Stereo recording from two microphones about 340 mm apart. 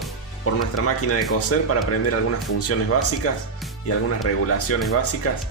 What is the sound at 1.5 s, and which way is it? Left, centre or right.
Speech, left.